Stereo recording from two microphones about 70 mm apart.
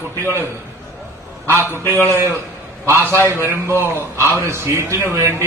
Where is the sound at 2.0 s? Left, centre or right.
Right.